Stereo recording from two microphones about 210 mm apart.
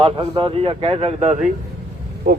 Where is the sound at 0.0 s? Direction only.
25° right (ahead or behind).